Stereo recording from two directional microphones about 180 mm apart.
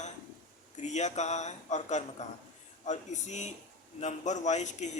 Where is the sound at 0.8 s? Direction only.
40° left (ahead or behind).